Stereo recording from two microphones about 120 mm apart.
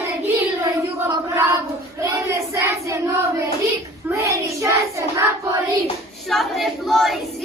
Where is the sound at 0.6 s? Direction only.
20° right (ahead or behind).